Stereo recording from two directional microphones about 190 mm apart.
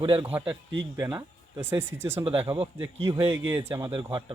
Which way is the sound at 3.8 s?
25° right (ahead or behind).